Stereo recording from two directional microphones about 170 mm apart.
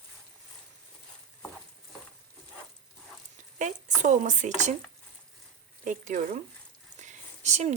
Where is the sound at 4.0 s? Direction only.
45° right (ahead or behind).